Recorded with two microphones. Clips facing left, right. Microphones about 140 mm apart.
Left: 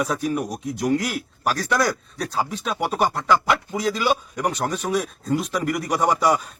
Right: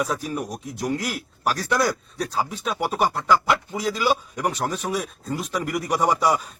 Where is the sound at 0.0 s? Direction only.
Centre (ahead or behind).